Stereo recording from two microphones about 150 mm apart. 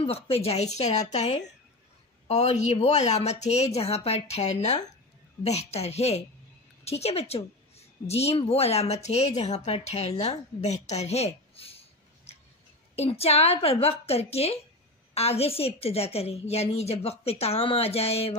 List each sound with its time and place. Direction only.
0.0 s a woman's voice: 40° left (ahead or behind)
12.9 s a woman's voice: 45° left (ahead or behind)